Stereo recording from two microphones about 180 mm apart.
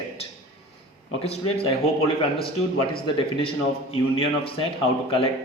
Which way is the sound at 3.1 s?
30° left (ahead or behind).